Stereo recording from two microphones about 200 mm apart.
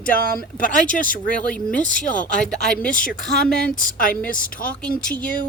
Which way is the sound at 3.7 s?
40° left (ahead or behind).